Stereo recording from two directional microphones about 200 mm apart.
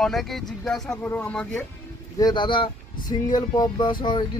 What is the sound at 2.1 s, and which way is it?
Speech, 20° left (ahead or behind).